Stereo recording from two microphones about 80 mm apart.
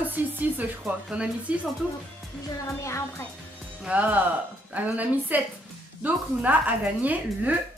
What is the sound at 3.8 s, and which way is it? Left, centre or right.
Speech, right.